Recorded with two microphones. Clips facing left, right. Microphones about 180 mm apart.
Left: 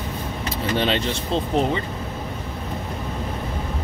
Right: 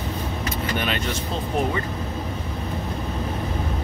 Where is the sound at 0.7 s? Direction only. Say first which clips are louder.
Left 6 dB; 30° left (ahead or behind).